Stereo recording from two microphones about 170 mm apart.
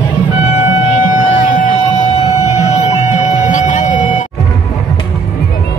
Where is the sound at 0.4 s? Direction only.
45° left (ahead or behind).